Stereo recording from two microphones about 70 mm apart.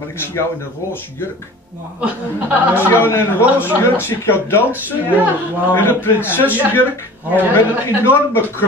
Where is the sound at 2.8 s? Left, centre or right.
Left.